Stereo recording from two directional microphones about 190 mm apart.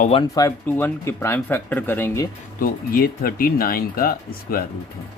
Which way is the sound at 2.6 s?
50° left (ahead or behind).